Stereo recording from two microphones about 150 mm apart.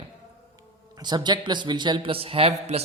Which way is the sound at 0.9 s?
30° right (ahead or behind).